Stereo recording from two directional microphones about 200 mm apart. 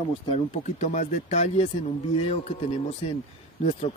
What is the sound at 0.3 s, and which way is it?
Speech, 35° left (ahead or behind).